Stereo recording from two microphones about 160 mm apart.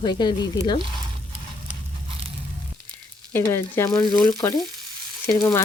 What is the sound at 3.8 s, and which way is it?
Speech, centre (ahead or behind).